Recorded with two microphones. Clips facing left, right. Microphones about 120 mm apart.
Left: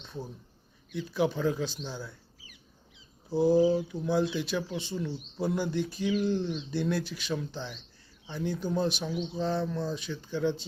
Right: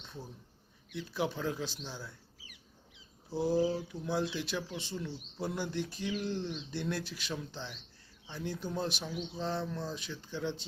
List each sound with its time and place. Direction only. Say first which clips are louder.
0.9 s speech: left 6 dB; centre (ahead or behind)
3.5 s speech: left 6 dB; 25° left (ahead or behind)
3.8 s speech: left 6 dB; centre (ahead or behind)